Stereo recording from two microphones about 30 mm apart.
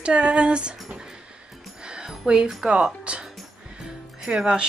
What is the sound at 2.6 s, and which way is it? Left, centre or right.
Speech, right.